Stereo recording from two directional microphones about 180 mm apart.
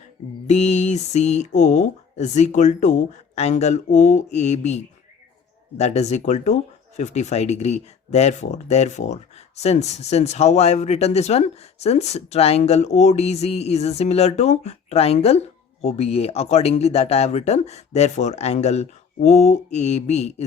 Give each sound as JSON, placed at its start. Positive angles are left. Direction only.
{"t": 0.4, "sound": "speech", "side_deg": 40}